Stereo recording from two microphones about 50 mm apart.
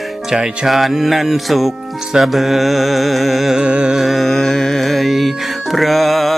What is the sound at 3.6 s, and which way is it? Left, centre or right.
Music, centre.